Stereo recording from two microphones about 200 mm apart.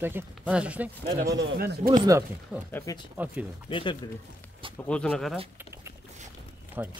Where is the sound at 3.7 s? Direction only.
25° left (ahead or behind).